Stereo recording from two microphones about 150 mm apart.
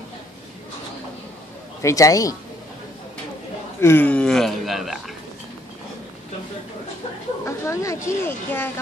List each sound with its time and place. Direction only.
1.8 s a woman's voice: 20° left (ahead or behind)
3.8 s speech: 15° left (ahead or behind)
7.4 s a woman's voice: 20° left (ahead or behind)